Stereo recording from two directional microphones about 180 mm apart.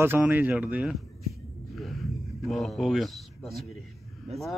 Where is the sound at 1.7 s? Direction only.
Centre (ahead or behind).